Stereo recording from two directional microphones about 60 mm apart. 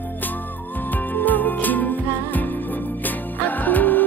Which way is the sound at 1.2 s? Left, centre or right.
Left.